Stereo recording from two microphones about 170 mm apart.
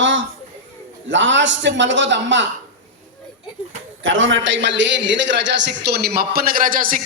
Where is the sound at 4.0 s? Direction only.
90° right.